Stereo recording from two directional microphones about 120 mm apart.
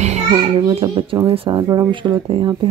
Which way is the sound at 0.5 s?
45° right (ahead or behind).